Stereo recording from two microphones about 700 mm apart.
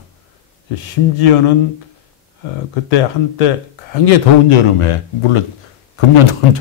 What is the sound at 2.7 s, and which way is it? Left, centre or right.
A man's voice, left.